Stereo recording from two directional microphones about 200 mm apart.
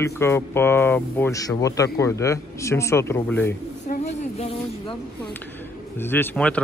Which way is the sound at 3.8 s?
35° left (ahead or behind).